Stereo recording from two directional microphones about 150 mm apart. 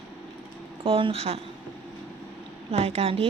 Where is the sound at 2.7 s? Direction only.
45° right (ahead or behind).